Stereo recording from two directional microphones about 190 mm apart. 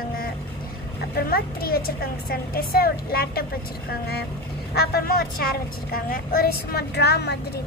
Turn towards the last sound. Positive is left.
turn(degrees=60)  # may be behind; listen again after turning